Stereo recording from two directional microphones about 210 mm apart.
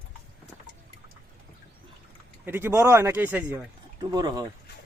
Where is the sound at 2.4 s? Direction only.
10° right (ahead or behind).